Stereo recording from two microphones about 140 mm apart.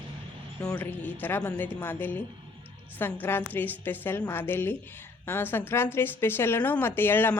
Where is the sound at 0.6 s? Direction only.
10° left (ahead or behind).